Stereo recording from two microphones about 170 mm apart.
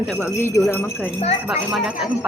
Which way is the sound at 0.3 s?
15° left (ahead or behind).